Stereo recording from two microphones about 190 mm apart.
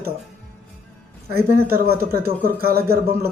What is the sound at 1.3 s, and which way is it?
Speech, 55° right (ahead or behind).